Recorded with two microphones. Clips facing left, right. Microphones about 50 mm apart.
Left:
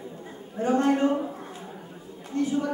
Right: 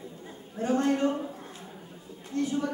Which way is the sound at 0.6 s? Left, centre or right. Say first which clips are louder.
Left 3 dB; left.